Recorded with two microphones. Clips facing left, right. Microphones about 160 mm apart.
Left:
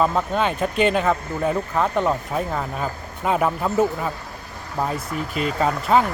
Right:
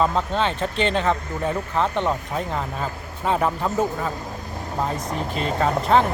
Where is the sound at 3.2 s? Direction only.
10° left (ahead or behind).